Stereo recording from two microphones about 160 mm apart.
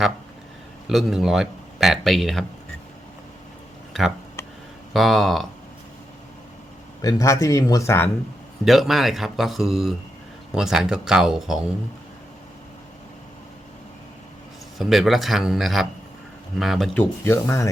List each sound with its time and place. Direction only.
0.9 s speech: centre (ahead or behind)
4.9 s speech: centre (ahead or behind)
7.0 s speech: 20° left (ahead or behind)
8.6 s speech: centre (ahead or behind)
14.8 s speech: centre (ahead or behind)
17.0 s speech: 15° left (ahead or behind)